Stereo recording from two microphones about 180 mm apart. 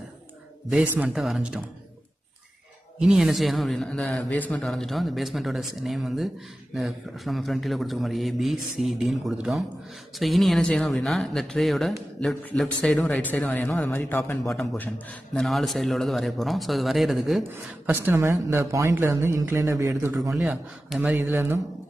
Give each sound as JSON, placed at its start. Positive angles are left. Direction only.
{"t": 0.7, "sound": "a man's voice", "side_deg": -5}
{"t": 3.0, "sound": "a man's voice", "side_deg": 0}
{"t": 14.5, "sound": "a man's voice", "side_deg": 0}
{"t": 17.5, "sound": "speech", "side_deg": -10}
{"t": 20.4, "sound": "a man's voice", "side_deg": 0}
{"t": 21.1, "sound": "speech", "side_deg": -15}